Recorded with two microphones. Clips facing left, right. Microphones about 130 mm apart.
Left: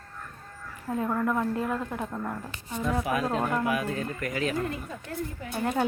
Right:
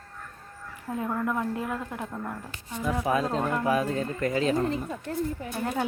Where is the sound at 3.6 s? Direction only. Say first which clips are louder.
Right 3 dB; 35° right (ahead or behind).